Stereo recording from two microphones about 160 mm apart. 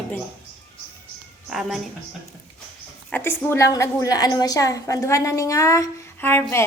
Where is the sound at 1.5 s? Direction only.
Centre (ahead or behind).